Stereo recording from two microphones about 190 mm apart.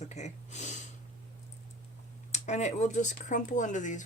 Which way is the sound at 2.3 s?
40° left (ahead or behind).